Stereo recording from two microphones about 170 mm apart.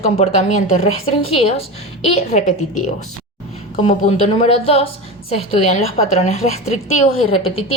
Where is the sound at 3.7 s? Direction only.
40° left (ahead or behind).